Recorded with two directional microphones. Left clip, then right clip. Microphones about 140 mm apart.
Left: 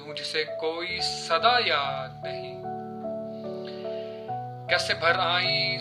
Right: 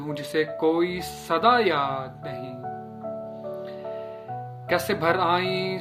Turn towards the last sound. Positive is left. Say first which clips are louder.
# right 1 dB
turn(degrees=15)  # may be behind; listen again after turning